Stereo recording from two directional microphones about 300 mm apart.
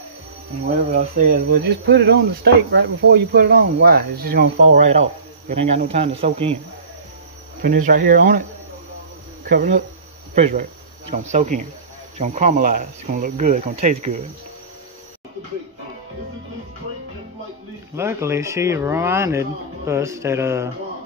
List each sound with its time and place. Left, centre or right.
0.7 s speech: right
7.6 s speech: right
17.9 s speech: centre